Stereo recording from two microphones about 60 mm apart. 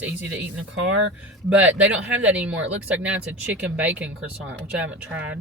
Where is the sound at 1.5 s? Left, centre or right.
Right.